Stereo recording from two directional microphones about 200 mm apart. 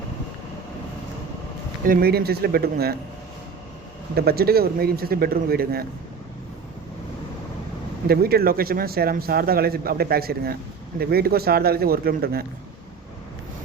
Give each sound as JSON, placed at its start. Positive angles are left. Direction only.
{"t": 1.8, "sound": "speech", "side_deg": -45}
{"t": 4.1, "sound": "speech", "side_deg": -50}
{"t": 8.0, "sound": "speech", "side_deg": -50}